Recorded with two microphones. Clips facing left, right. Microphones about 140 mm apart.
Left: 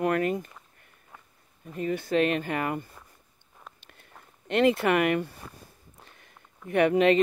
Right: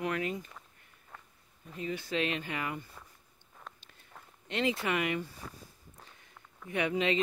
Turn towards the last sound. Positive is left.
turn(degrees=60)  # may be behind; listen again after turning